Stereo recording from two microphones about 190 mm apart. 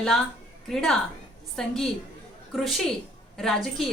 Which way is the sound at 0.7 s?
Centre (ahead or behind).